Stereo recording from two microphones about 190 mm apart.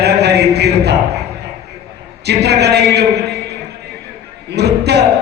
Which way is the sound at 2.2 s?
60° right (ahead or behind).